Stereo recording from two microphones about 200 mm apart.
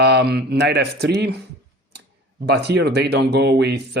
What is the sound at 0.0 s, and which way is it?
A man's voice, 55° right (ahead or behind).